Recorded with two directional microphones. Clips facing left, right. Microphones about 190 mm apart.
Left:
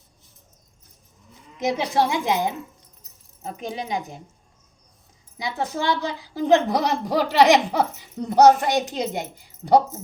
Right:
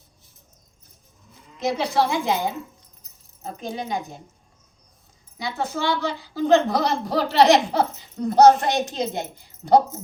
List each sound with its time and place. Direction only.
1.5 s a woman's voice: 20° left (ahead or behind)
5.4 s a woman's voice: 15° left (ahead or behind)